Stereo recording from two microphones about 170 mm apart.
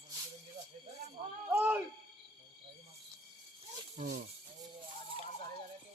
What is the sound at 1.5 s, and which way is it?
Speech, 10° right (ahead or behind).